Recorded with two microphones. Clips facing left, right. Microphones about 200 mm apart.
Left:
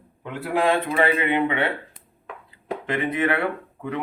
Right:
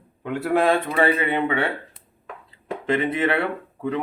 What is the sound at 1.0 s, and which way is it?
Speech, 35° right (ahead or behind).